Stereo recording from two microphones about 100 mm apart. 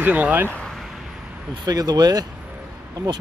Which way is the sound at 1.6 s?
40° right (ahead or behind).